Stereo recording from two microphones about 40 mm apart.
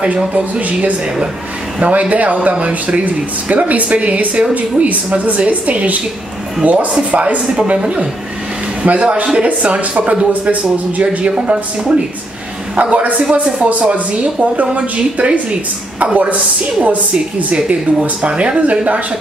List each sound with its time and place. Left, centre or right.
0.0 s speech: right
8.8 s speech: right
11.5 s speech: right
12.7 s speech: right
13.2 s speech: right
16.8 s speech: right